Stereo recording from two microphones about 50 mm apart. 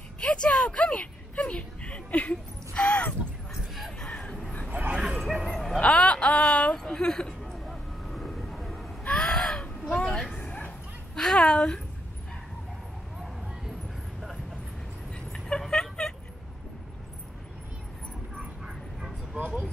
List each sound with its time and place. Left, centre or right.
0.2 s speech: centre
4.0 s a sound: centre
4.6 s bow-wow: right
4.9 s bow-wow: centre
5.2 s bow-wow: centre
5.8 s a woman's voice: left
7.5 s vehicle: centre
9.0 s a sound: centre
9.9 s vehicle: centre
10.4 s bow-wow: left
11.1 s speech: centre
15.3 s vehicle: centre
18.4 s a sound: centre
19.3 s vehicle: right